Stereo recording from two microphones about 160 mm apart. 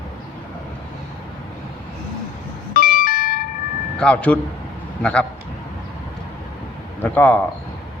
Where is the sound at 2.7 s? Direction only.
60° left (ahead or behind).